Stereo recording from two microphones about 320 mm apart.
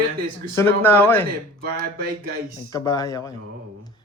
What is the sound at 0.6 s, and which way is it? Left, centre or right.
Speech, centre.